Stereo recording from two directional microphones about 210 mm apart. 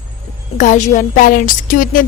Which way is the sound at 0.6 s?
35° left (ahead or behind).